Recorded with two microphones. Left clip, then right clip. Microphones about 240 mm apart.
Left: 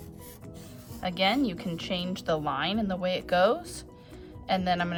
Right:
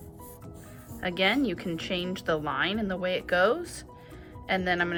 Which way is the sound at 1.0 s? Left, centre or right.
Centre.